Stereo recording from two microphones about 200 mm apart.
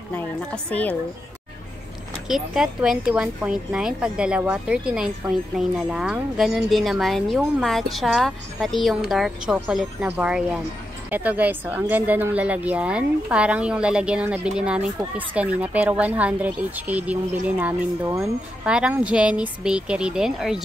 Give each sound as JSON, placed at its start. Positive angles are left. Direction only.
{"t": 0.1, "sound": "a woman's voice", "side_deg": 5}
{"t": 2.2, "sound": "a woman's voice", "side_deg": 0}